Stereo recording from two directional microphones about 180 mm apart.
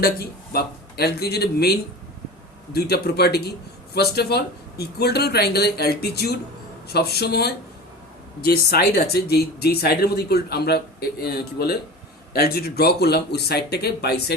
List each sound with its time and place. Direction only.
0.0 s speech: 55° left (ahead or behind)